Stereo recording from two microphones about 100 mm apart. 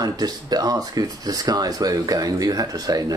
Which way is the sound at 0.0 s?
40° right (ahead or behind).